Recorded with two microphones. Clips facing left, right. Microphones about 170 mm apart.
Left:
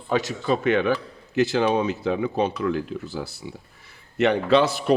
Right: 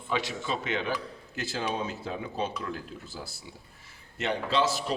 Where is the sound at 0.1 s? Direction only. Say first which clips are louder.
Left 8 dB; 45° left (ahead or behind).